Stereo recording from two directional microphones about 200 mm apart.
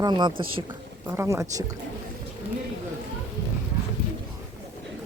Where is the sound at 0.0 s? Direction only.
20° right (ahead or behind).